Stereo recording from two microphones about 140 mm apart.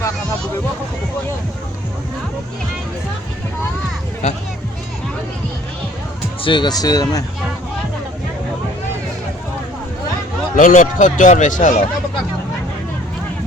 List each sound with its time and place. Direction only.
6.4 s speech: 35° left (ahead or behind)
10.5 s speech: 70° left (ahead or behind)